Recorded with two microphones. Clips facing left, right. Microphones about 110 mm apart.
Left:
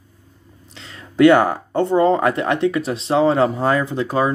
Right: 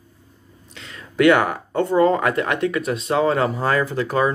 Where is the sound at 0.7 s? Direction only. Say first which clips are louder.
Left 4 dB; 30° left (ahead or behind).